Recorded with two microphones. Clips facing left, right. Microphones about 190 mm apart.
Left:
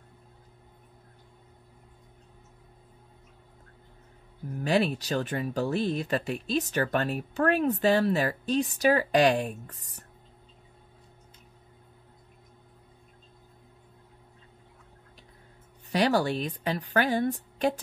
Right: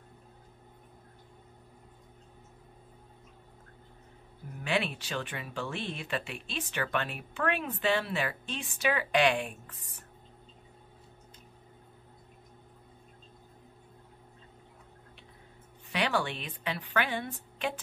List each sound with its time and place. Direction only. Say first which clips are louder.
4.6 s speech: left 7 dB; 40° left (ahead or behind)
15.9 s speech: left 6 dB; 40° left (ahead or behind)